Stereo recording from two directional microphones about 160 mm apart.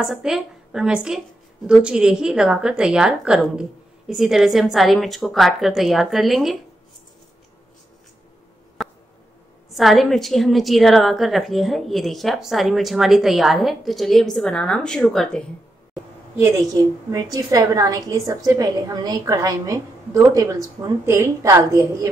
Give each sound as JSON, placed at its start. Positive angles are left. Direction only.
{"t": 0.0, "sound": "a woman's voice", "side_deg": -5}
{"t": 8.8, "sound": "a sound", "side_deg": 0}
{"t": 9.8, "sound": "a woman's voice", "side_deg": 0}
{"t": 15.9, "sound": "a woman's voice", "side_deg": -15}